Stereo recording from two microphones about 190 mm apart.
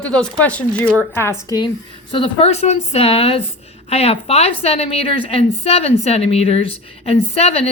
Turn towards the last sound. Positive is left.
turn(degrees=30)  # may be behind; listen again after turning